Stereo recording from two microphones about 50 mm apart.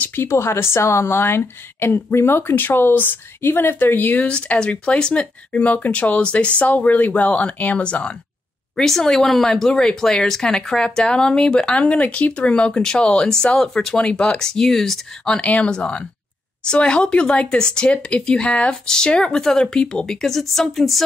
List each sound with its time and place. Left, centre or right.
0.2 s a woman's voice: left
4.3 s speech: left
8.7 s speech: centre
13.6 s speech: centre
13.9 s speech: left
14.4 s speech: centre
15.4 s speech: left; by 21.0 s centre